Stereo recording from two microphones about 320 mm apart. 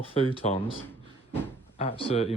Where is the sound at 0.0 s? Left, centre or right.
Centre.